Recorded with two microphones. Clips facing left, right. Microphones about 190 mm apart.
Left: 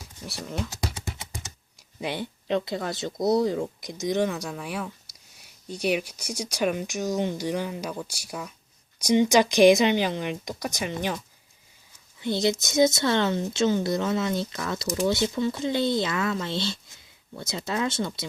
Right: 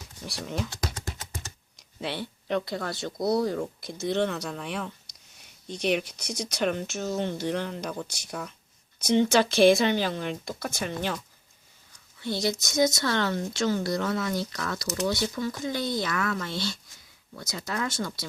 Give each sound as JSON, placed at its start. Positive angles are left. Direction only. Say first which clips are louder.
{"t": 0.0, "sound": "a sound", "louder": "even", "side_deg": 0}
{"t": 2.0, "sound": "speech", "louder": "left 2 dB", "side_deg": 15}
{"t": 12.2, "sound": "speech", "louder": "left 4 dB", "side_deg": 20}